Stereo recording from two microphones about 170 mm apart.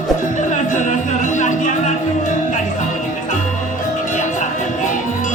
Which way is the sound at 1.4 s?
45° left (ahead or behind).